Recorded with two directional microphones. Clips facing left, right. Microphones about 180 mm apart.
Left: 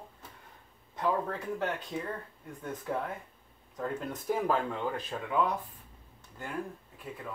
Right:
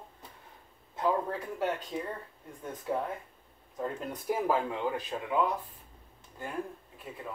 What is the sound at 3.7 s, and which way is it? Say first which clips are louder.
Speech: even; 10° right (ahead or behind).